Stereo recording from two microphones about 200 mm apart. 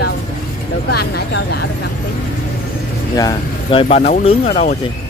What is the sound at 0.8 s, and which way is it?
Speech, 55° left (ahead or behind).